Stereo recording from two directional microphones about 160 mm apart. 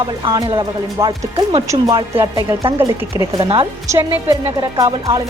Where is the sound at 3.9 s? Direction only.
15° right (ahead or behind).